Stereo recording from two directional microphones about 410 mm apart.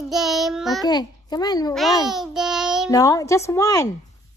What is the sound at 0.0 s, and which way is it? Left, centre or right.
Child singing, centre.